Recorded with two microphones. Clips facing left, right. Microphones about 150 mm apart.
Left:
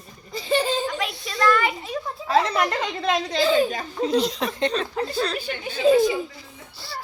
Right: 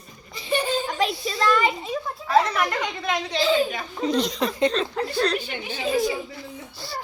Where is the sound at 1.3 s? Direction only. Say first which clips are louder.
Left 2 dB; 20° right (ahead or behind).